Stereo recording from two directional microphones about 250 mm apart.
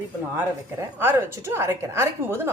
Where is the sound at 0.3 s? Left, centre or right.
Centre.